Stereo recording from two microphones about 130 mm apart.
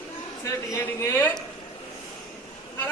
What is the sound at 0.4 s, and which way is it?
Speech, 25° left (ahead or behind).